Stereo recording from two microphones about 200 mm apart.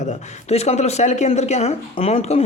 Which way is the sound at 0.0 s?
35° left (ahead or behind).